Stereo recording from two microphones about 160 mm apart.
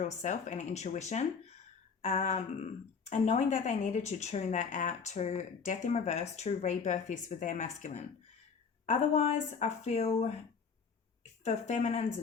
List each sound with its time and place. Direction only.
0.0 s speech: 45° left (ahead or behind)